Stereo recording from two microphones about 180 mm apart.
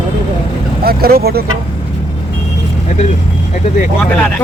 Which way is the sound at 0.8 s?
55° right (ahead or behind).